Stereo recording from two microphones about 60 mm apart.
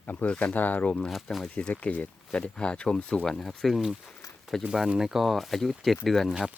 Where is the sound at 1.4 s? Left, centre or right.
Centre.